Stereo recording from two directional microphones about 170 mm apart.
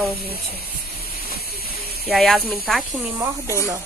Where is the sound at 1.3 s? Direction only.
65° left (ahead or behind).